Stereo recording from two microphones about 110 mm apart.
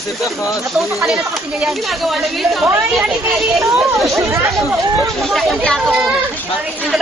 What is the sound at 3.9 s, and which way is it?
Speech, centre (ahead or behind).